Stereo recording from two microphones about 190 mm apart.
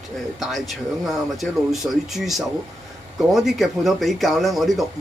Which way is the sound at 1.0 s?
Centre (ahead or behind).